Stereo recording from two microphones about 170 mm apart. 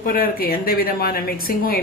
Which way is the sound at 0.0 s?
60° left (ahead or behind).